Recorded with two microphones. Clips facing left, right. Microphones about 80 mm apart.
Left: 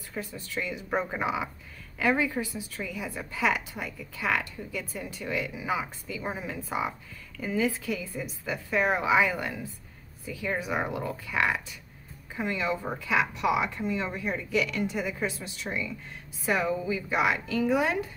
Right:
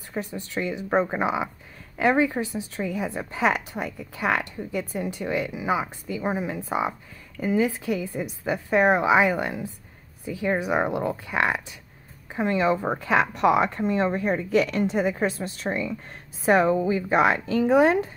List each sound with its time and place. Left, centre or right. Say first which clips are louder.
0.1 s a woman's voice: right 5 dB; right